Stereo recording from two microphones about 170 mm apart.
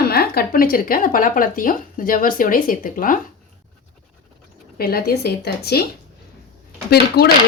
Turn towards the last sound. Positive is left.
turn(degrees=70)  # may be behind; listen again after turning